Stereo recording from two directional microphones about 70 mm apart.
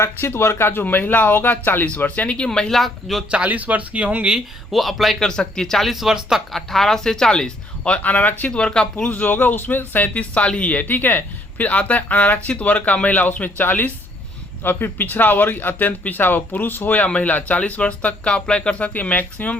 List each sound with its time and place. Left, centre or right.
0.0 s speech: left; by 2.5 s centre
2.5 s speech: centre
3.3 s speech: right
4.7 s speech: centre
6.5 s speech: centre
9.0 s speech: left